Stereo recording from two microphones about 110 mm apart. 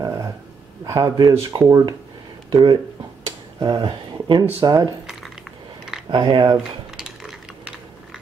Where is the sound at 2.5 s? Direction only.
45° right (ahead or behind).